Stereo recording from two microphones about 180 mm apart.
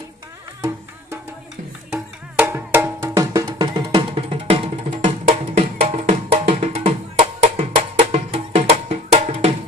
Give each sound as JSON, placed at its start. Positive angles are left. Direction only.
{"t": 2.4, "sound": "music", "side_deg": -10}